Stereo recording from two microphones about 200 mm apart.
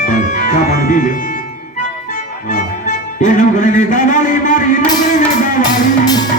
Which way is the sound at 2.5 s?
35° left (ahead or behind).